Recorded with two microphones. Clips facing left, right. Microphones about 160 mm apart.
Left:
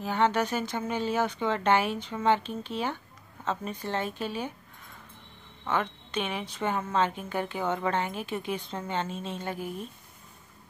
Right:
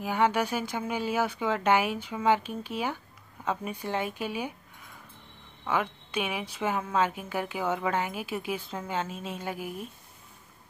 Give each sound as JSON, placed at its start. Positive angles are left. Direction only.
{"t": 0.0, "sound": "a woman's voice", "side_deg": -10}
{"t": 5.7, "sound": "a woman's voice", "side_deg": -10}